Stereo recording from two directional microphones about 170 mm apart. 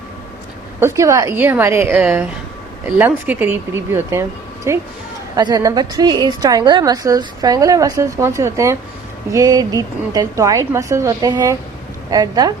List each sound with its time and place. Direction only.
0.8 s a woman's voice: 15° right (ahead or behind)